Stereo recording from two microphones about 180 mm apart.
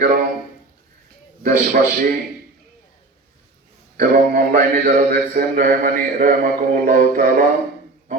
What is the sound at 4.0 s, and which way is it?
Mantra, 55° right (ahead or behind).